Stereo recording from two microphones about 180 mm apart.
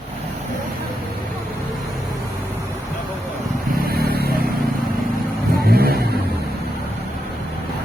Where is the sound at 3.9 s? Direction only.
60° right (ahead or behind).